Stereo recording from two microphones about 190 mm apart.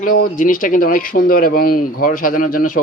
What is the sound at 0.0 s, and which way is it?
Speech, 45° left (ahead or behind).